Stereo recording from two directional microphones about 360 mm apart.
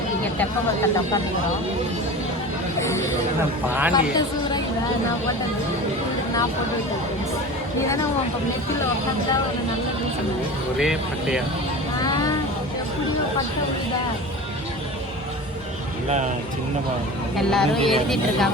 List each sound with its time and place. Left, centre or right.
0.3 s speech: centre
3.7 s speech: centre
7.8 s speech: centre
10.8 s speech: centre
11.9 s vehicle: centre
16.0 s speech: centre
17.3 s speech: centre